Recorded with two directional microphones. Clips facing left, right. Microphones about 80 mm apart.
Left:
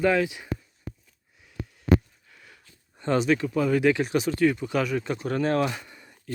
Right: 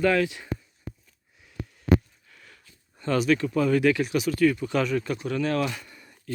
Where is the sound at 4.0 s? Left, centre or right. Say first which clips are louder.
Even; left.